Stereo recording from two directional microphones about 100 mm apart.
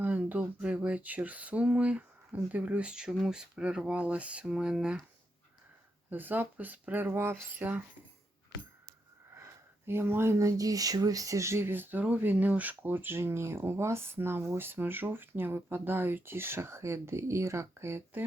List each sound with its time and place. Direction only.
0.0 s a sound: 15° right (ahead or behind)
6.1 s speech: 20° right (ahead or behind)
9.4 s speech: 25° right (ahead or behind)